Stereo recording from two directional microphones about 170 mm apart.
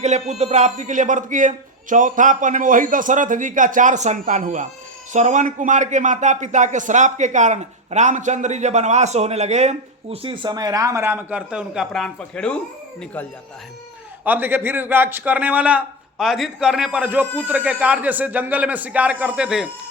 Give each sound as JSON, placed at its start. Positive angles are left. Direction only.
{"t": 0.0, "sound": "speech", "side_deg": -40}
{"t": 14.3, "sound": "a man's voice", "side_deg": -10}